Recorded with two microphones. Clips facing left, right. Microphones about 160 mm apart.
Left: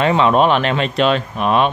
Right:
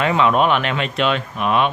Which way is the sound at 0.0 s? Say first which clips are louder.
Left 3 dB; 30° left (ahead or behind).